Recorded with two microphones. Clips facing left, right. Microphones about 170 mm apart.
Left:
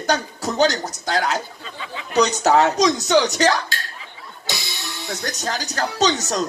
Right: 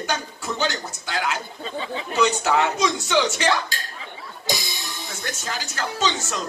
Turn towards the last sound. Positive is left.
turn(degrees=40)  # may be behind; listen again after turning